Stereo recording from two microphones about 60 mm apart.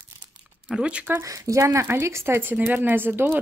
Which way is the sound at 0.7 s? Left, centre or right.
Centre.